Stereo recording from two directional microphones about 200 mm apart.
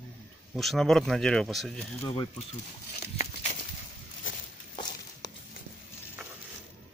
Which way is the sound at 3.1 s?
35° left (ahead or behind).